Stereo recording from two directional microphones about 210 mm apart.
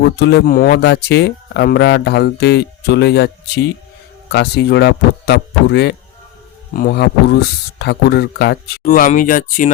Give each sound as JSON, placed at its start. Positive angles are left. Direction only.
{"t": 0.0, "sound": "speech", "side_deg": 55}